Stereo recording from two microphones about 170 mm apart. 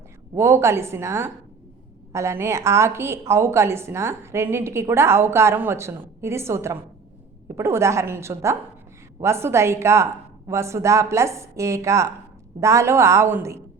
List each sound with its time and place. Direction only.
0.3 s a woman's voice: 15° right (ahead or behind)